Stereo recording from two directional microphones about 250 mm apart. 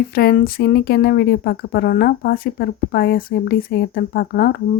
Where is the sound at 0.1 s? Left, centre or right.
Left.